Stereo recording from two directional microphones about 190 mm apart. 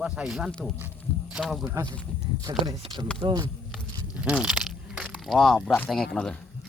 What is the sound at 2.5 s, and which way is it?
Speech, 25° right (ahead or behind).